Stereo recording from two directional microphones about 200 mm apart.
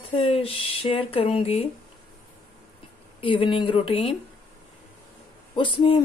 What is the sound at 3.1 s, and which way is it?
A woman's voice, 25° left (ahead or behind).